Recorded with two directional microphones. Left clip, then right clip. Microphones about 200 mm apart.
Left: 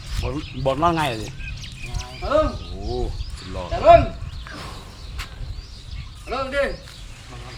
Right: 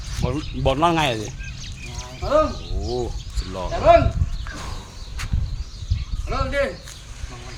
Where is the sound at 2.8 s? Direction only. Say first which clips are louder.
Right 4 dB; 55° right (ahead or behind).